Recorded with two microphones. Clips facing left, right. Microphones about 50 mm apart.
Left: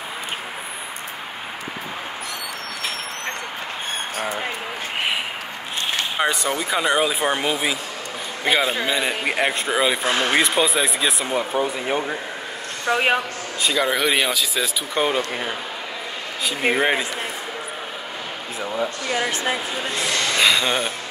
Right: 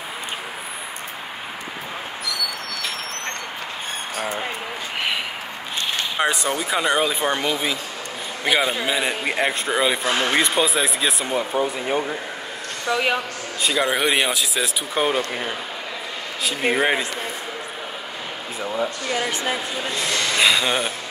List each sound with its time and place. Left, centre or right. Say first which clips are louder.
6.1 s speech: right 1 dB; centre
12.8 s speech: left 2 dB; left
13.6 s speech: even; centre
18.6 s speech: even; centre
19.0 s speech: left 1 dB; centre
19.9 s speech: left 1 dB; left
20.3 s speech: even; centre